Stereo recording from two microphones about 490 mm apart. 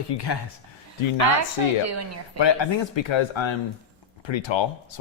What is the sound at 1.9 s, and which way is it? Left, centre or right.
Speech, right.